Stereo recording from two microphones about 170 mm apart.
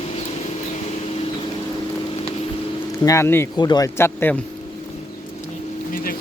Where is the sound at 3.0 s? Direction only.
20° left (ahead or behind).